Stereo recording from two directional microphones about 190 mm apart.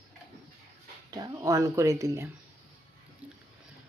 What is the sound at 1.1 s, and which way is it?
Speech, 20° right (ahead or behind).